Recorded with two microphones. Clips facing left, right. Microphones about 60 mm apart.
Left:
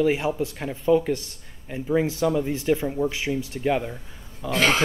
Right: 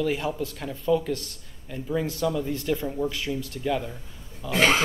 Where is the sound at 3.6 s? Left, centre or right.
Left.